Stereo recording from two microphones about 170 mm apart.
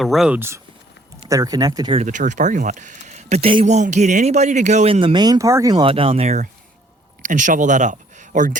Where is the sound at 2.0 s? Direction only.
45° right (ahead or behind).